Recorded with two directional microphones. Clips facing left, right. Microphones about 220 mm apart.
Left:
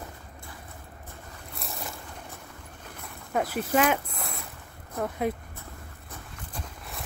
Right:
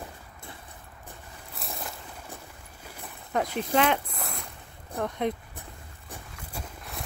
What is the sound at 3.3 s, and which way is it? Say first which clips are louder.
Speech: left 1 dB; 5° left (ahead or behind).